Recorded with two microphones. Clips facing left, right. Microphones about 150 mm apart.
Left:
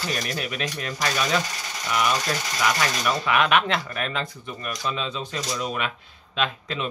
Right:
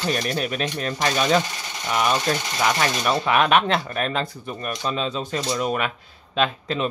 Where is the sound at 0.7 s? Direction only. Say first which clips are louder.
Right 3 dB; 25° right (ahead or behind).